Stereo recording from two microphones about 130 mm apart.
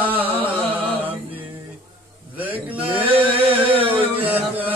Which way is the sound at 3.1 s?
45° right (ahead or behind).